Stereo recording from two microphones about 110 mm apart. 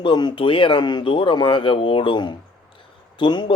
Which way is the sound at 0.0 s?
45° left (ahead or behind).